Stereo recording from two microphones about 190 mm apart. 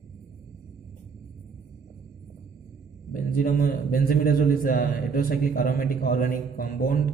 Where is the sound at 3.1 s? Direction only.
45° left (ahead or behind).